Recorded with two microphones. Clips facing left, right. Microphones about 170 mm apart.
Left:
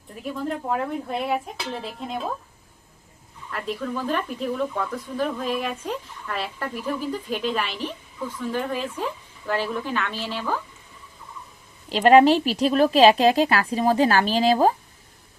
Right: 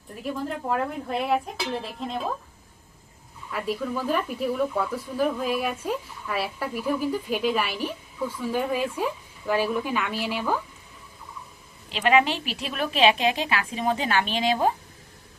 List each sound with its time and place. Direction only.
0.2 s speech: centre (ahead or behind)
3.5 s speech: 10° right (ahead or behind)
11.9 s a woman's voice: 35° left (ahead or behind)